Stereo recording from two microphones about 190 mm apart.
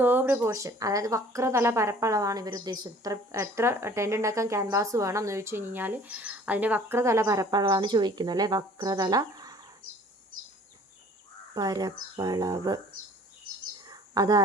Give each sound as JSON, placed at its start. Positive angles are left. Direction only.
{"t": 0.0, "sound": "speech", "side_deg": -10}
{"t": 11.5, "sound": "speech", "side_deg": -20}
{"t": 13.8, "sound": "a sound", "side_deg": -20}